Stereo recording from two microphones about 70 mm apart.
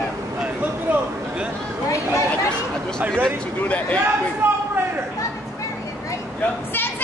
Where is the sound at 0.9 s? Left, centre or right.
Right.